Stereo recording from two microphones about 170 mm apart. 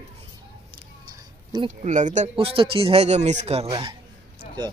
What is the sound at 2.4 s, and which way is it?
A man's voice, 30° right (ahead or behind).